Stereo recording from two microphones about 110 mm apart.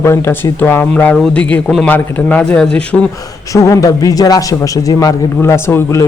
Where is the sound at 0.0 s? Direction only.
25° left (ahead or behind).